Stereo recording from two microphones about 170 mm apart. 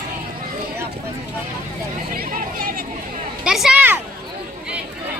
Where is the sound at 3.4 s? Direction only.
5° right (ahead or behind).